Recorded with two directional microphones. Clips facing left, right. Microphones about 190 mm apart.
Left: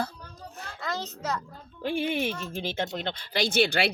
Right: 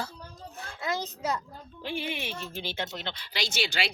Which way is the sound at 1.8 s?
50° left (ahead or behind).